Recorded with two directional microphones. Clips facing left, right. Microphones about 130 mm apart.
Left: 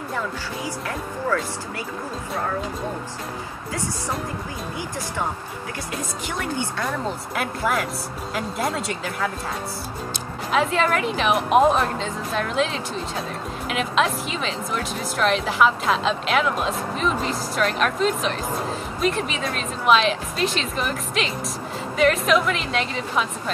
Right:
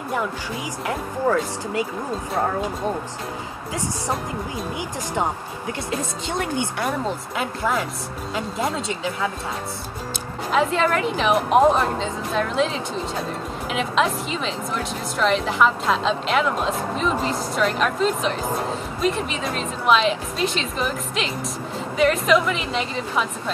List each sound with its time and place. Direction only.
5.9 s speech: 25° right (ahead or behind)
7.3 s speech: 5° left (ahead or behind)
10.5 s speech: centre (ahead or behind)